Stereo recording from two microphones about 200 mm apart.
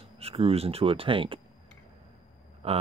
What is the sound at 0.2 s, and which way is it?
Speech, 30° right (ahead or behind).